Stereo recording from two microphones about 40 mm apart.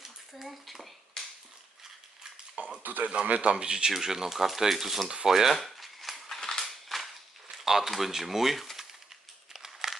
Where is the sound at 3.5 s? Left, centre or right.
Right.